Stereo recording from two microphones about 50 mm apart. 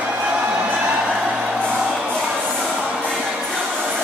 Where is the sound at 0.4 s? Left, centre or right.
Right.